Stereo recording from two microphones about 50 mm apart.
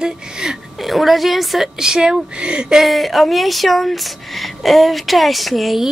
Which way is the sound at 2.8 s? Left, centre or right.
Centre.